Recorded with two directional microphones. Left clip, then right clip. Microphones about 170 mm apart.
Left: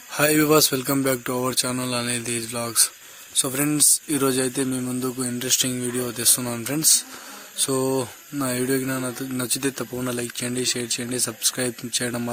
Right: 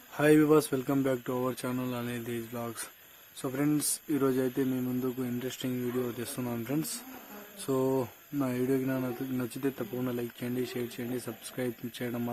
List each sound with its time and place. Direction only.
0.2 s speech: 25° left (ahead or behind)
7.7 s speech: 35° left (ahead or behind)